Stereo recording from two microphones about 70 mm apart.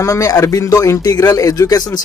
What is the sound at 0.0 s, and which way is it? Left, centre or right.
A man's voice, left.